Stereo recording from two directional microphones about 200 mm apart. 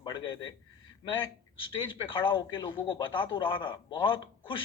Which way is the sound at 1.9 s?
25° left (ahead or behind).